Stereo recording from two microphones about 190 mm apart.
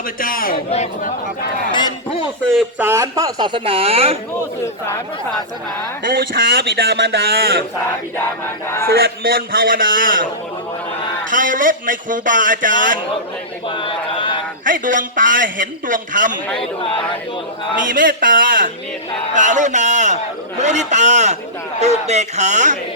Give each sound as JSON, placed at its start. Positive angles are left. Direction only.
{"t": 0.2, "sound": "a man's voice", "side_deg": 50}
{"t": 0.7, "sound": "speech", "side_deg": 35}
{"t": 1.7, "sound": "a sound", "side_deg": 25}
{"t": 2.5, "sound": "speech", "side_deg": 0}
{"t": 2.8, "sound": "speech", "side_deg": -15}
{"t": 6.1, "sound": "a man's voice", "side_deg": -50}
{"t": 8.1, "sound": "a sound", "side_deg": 10}
{"t": 8.9, "sound": "a man's voice", "side_deg": -55}
{"t": 11.3, "sound": "a man's voice", "side_deg": -45}
{"t": 13.7, "sound": "speech", "side_deg": 25}
{"t": 14.6, "sound": "a man's voice", "side_deg": -45}
{"t": 17.8, "sound": "a man's voice", "side_deg": -45}